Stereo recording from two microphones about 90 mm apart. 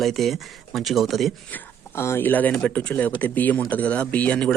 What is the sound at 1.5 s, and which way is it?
Speech, 25° left (ahead or behind).